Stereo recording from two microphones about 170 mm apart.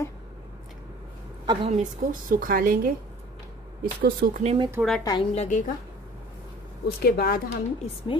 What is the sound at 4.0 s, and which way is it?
Speech, 60° right (ahead or behind).